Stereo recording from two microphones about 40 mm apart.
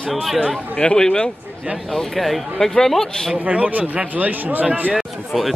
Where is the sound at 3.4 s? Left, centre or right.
Right.